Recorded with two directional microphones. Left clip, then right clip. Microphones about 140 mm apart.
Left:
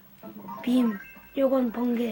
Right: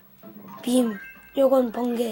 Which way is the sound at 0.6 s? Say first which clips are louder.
Right 4 dB; 55° right (ahead or behind).